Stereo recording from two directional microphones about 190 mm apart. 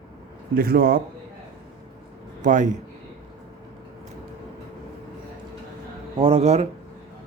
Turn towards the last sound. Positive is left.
turn(degrees=-35)  # may be behind; listen again after turning